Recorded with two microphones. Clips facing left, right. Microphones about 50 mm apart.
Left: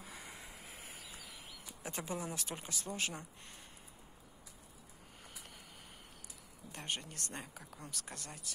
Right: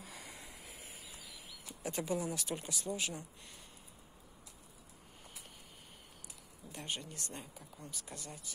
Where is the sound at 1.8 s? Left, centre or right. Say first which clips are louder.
Right 4 dB; left.